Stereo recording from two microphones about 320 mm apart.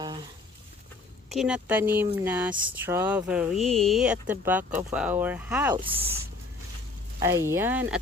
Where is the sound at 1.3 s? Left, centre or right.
Centre.